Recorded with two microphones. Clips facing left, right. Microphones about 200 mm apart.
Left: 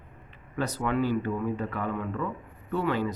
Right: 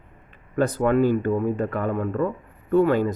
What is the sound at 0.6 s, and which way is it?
Speech, 50° right (ahead or behind).